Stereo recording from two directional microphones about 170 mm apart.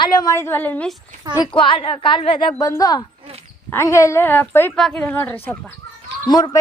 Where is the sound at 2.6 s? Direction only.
20° left (ahead or behind).